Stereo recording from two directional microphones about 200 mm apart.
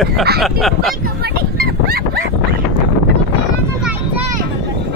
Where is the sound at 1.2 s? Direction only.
50° right (ahead or behind).